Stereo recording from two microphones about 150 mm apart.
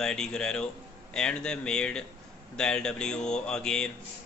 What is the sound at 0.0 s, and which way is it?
Speech, 5° left (ahead or behind).